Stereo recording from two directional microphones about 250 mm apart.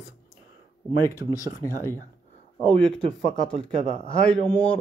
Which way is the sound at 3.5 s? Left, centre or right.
Right.